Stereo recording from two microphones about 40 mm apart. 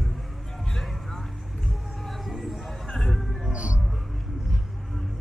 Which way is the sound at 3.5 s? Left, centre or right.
Right.